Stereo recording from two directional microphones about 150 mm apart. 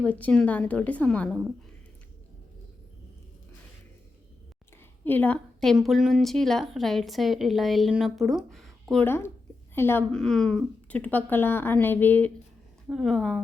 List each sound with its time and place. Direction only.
0.0 s speech: 10° left (ahead or behind)
5.0 s a woman's voice: 10° left (ahead or behind)
9.0 s speech: 15° left (ahead or behind)
10.2 s a woman's voice: 5° left (ahead or behind)